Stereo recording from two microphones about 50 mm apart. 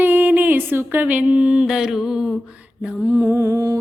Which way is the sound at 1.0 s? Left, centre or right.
Right.